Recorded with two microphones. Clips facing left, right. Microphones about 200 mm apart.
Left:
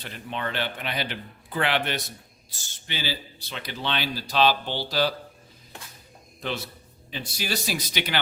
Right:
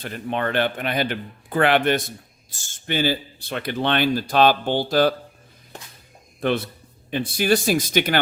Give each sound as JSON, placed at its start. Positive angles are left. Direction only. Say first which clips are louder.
{"t": 0.0, "sound": "a man's voice", "louder": "right 7 dB", "side_deg": -50}
{"t": 6.4, "sound": "a man's voice", "louder": "right 9 dB", "side_deg": -55}